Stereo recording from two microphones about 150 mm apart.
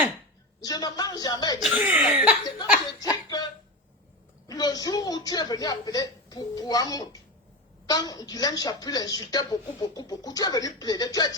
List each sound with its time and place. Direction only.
0.6 s a woman's voice: 25° left (ahead or behind)
1.6 s speech: 10° right (ahead or behind)
3.0 s snicker: 25° left (ahead or behind)
4.4 s a woman's voice: 25° left (ahead or behind)